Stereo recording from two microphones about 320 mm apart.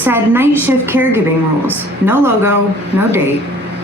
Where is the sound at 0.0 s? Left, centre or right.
Centre.